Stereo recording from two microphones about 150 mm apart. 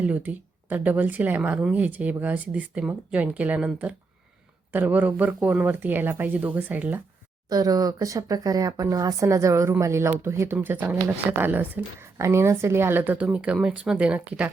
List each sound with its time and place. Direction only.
0.0 s speech: 10° right (ahead or behind)
7.5 s speech: 25° right (ahead or behind); by 14.5 s 10° right (ahead or behind)